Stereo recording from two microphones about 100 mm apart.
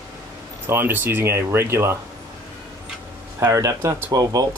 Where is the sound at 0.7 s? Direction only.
20° right (ahead or behind).